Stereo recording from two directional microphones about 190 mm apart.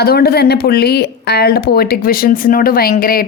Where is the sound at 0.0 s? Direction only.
55° left (ahead or behind).